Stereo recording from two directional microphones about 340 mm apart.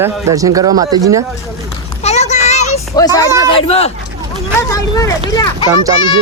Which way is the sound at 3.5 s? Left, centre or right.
Centre.